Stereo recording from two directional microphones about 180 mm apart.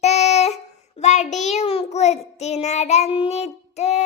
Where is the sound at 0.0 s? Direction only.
40° left (ahead or behind).